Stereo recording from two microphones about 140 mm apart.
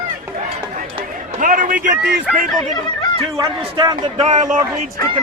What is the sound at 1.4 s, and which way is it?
Speech, 70° right (ahead or behind).